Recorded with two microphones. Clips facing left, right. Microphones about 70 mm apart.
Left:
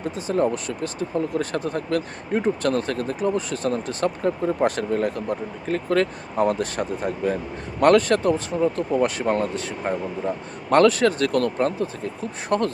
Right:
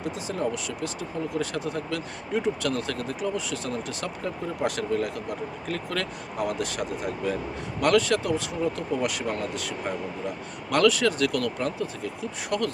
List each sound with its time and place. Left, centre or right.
0.0 s speech: left